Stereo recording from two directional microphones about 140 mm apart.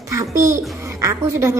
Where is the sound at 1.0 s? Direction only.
20° right (ahead or behind).